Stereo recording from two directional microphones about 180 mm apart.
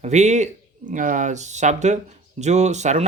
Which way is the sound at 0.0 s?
40° right (ahead or behind).